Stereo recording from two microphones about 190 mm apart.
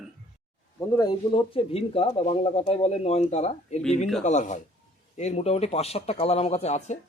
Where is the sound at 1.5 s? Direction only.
30° left (ahead or behind).